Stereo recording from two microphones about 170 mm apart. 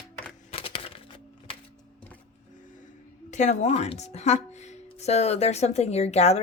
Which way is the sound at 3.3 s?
45° left (ahead or behind).